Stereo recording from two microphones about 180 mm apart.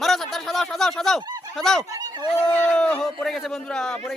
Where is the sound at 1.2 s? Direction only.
20° right (ahead or behind).